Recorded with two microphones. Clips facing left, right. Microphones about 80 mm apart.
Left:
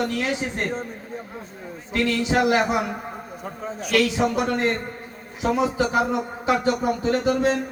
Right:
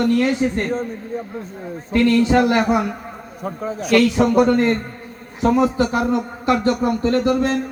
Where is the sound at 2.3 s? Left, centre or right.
Centre.